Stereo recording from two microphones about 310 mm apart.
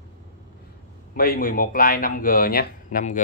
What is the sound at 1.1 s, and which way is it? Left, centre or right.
Speech, left.